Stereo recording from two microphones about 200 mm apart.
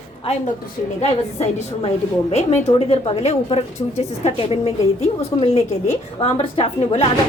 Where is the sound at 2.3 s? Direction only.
35° left (ahead or behind).